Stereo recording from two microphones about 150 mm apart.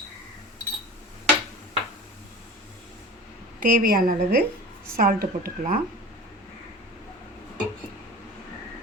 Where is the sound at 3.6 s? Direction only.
75° right (ahead or behind).